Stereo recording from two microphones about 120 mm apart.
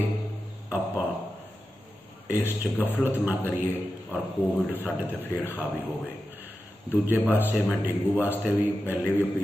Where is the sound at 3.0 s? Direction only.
15° right (ahead or behind).